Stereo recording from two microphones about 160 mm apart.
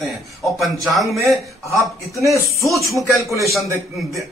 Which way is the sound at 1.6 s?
20° left (ahead or behind).